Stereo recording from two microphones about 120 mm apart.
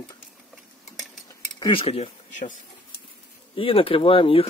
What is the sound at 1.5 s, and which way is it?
Speech, 45° left (ahead or behind).